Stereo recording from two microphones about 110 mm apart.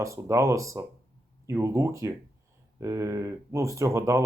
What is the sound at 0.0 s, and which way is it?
Speech, 30° right (ahead or behind).